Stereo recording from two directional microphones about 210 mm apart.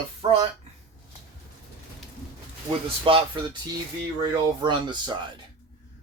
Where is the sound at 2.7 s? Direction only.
25° right (ahead or behind).